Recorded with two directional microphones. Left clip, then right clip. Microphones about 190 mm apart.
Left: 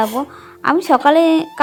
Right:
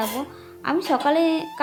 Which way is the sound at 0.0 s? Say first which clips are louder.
Left 9 dB; 35° left (ahead or behind).